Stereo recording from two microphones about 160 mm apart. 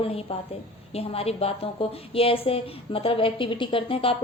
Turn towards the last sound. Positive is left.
turn(degrees=35)  # may be behind; listen again after turning